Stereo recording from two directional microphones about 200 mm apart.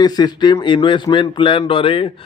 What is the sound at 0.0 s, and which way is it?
Mantra, 20° left (ahead or behind).